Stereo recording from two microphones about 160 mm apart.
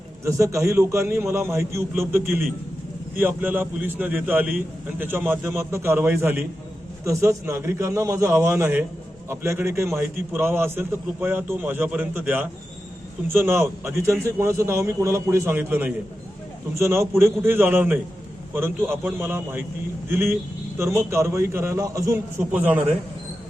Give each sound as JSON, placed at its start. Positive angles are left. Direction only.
{"t": 0.3, "sound": "a man's voice", "side_deg": -20}